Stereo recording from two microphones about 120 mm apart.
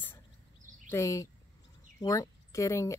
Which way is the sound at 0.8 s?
25° left (ahead or behind).